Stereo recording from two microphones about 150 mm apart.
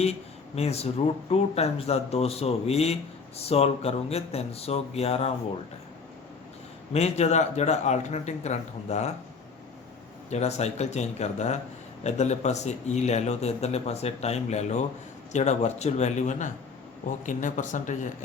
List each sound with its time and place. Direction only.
0.5 s speech: 45° left (ahead or behind)
6.9 s speech: 45° left (ahead or behind)
10.2 s speech: 45° left (ahead or behind)